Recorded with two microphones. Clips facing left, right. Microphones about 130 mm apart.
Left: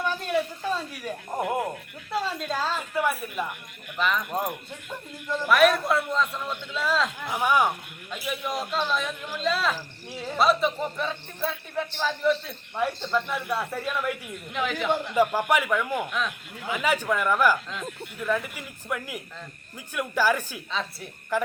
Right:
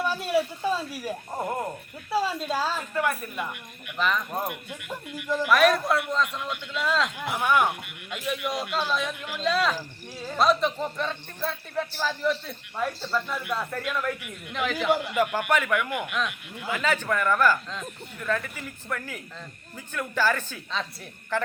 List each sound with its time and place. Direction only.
0.0 s a sound: 5° right (ahead or behind)
1.4 s a man's voice: 10° left (ahead or behind)
2.0 s a woman's voice: 10° right (ahead or behind)
2.9 s a man's voice: 5° left (ahead or behind)
5.5 s speech: centre (ahead or behind)
7.3 s a man's voice: 10° left (ahead or behind)
13.1 s a man's voice: 15° left (ahead or behind)
14.5 s speech: centre (ahead or behind)
15.4 s a man's voice: 10° left (ahead or behind)
16.0 s speech: centre (ahead or behind)
16.7 s a man's voice: 10° left (ahead or behind)